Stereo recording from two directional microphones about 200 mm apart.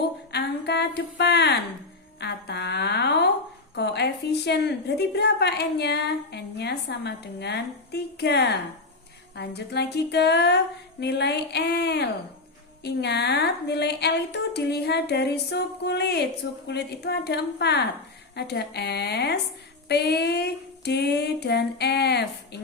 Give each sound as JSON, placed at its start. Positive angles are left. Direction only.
{"t": 0.3, "sound": "a woman's voice", "side_deg": 55}